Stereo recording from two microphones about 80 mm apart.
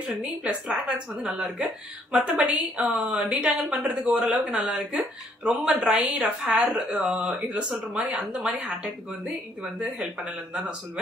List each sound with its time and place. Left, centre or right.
0.0 s a woman's voice: centre